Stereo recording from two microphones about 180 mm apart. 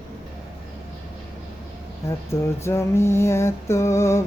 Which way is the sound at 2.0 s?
15° left (ahead or behind).